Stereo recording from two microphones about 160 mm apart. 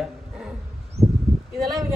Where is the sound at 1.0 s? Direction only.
Centre (ahead or behind).